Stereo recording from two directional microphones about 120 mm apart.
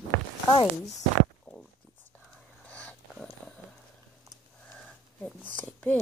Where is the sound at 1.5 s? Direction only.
25° left (ahead or behind).